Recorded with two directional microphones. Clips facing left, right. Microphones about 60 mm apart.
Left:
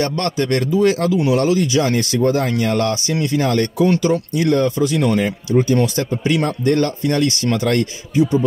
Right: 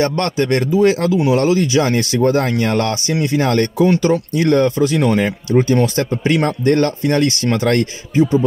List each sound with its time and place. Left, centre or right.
0.0 s speech: right
4.0 s speech: right